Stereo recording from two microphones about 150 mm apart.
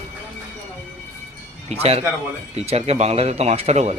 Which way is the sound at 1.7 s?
40° right (ahead or behind).